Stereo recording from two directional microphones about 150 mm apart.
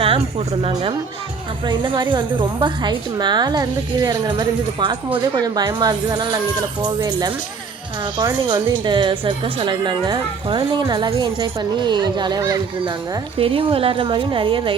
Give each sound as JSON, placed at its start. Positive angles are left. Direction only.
{"t": 0.0, "sound": "a woman's voice", "side_deg": -40}